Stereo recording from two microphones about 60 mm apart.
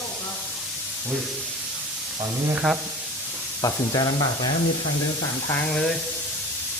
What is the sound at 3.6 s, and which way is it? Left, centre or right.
Speech, left.